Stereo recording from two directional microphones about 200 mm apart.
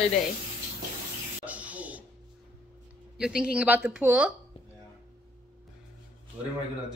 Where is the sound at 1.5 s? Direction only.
5° right (ahead or behind).